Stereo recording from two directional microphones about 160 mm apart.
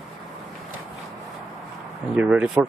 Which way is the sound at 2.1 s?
5° right (ahead or behind).